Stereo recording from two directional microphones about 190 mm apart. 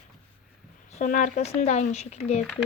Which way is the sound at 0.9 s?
40° left (ahead or behind).